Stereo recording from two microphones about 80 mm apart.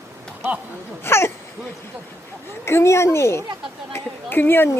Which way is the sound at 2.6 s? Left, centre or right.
Left.